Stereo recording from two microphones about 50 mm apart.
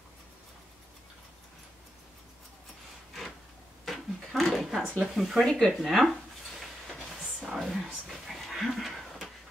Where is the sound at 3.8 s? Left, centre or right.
Centre.